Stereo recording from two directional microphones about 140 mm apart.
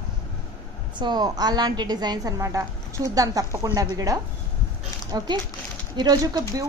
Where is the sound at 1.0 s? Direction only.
30° right (ahead or behind).